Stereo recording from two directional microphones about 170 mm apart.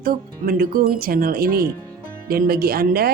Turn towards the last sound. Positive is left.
turn(degrees=-65)  # may be behind; listen again after turning